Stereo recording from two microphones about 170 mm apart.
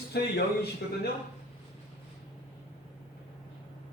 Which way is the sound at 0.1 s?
70° left (ahead or behind).